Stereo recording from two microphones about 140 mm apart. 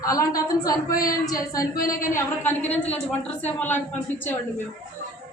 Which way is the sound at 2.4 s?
15° left (ahead or behind).